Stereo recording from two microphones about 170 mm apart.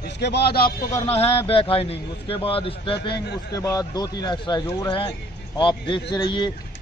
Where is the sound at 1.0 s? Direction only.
35° left (ahead or behind).